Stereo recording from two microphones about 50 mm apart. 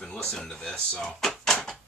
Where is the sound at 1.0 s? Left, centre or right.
Centre.